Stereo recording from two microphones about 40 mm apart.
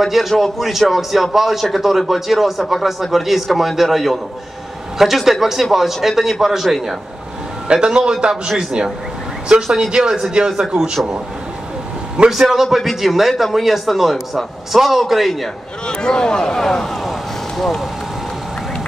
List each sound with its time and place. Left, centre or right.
0.0 s a man's voice: centre
7.6 s a man's voice: right
12.3 s a man's voice: centre
15.9 s speech: centre
17.0 s vehicle: centre